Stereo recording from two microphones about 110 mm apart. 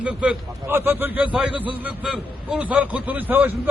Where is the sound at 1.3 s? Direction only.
5° right (ahead or behind).